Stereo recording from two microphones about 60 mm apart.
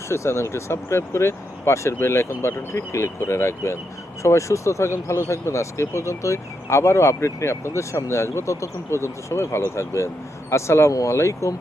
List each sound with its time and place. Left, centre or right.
0.1 s speech: left